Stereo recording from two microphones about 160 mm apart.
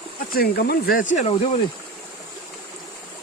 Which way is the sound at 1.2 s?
40° left (ahead or behind).